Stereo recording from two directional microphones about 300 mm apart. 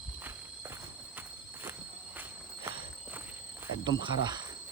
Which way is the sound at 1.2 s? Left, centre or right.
Centre.